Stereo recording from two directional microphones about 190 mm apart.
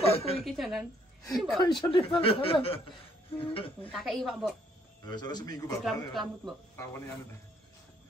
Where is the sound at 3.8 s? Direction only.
5° left (ahead or behind).